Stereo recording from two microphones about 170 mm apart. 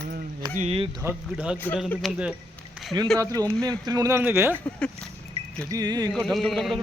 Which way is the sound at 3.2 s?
20° right (ahead or behind).